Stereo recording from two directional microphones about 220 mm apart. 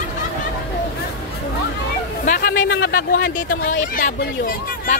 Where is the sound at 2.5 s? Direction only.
60° left (ahead or behind).